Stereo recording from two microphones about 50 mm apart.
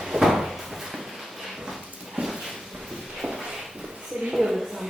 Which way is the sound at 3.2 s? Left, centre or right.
Centre.